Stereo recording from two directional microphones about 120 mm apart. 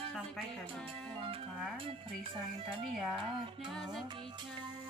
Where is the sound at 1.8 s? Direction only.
50° right (ahead or behind).